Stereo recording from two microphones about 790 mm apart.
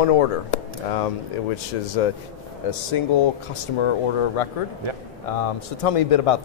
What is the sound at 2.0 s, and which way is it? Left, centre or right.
Speech, left.